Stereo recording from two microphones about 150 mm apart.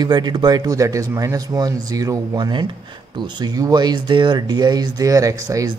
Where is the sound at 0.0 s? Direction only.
30° right (ahead or behind).